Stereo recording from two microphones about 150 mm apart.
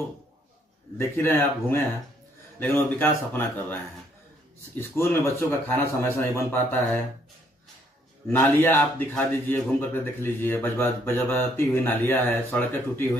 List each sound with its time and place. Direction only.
0.9 s a man's voice: 15° left (ahead or behind)
8.3 s a man's voice: 10° left (ahead or behind)